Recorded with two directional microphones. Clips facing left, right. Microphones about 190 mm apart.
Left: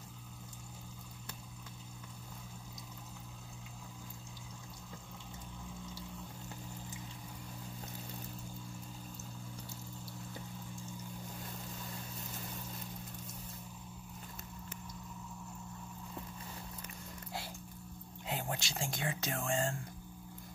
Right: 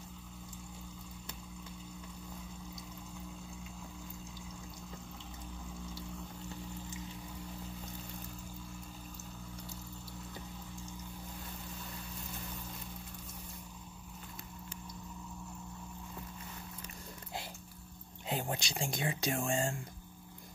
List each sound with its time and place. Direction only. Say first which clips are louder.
18.2 s speech: right 2 dB; 20° right (ahead or behind)